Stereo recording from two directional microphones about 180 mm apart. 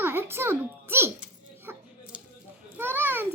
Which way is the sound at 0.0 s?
10° right (ahead or behind).